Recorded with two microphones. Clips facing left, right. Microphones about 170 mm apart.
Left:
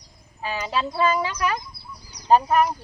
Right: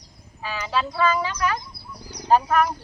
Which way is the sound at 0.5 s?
20° left (ahead or behind).